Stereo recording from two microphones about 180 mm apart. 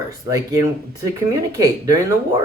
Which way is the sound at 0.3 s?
20° right (ahead or behind).